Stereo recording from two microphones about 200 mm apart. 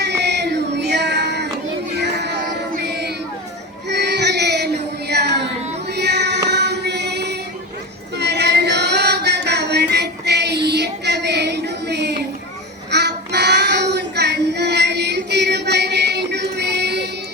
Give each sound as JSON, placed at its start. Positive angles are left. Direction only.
{"t": 0.0, "sound": "child singing", "side_deg": -60}
{"t": 2.0, "sound": "music", "side_deg": -60}
{"t": 2.8, "sound": "child singing", "side_deg": -55}
{"t": 5.9, "sound": "female singing", "side_deg": -55}
{"t": 8.1, "sound": "music", "side_deg": -55}
{"t": 12.9, "sound": "child singing", "side_deg": -55}